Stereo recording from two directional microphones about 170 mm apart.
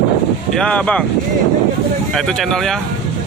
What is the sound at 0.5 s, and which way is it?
Speech, 5° left (ahead or behind).